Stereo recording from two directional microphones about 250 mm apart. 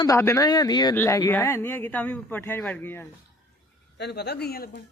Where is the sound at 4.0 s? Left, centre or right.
Left.